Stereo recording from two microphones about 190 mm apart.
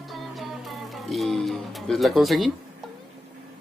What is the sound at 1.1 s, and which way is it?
Speech, centre (ahead or behind).